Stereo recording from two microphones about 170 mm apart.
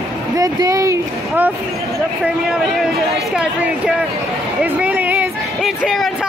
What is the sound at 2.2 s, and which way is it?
Speech, 5° right (ahead or behind).